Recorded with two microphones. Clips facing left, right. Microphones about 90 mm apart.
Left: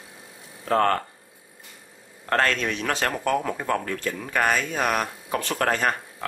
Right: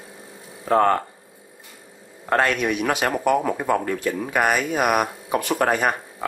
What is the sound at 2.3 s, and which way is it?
Speech, 15° right (ahead or behind).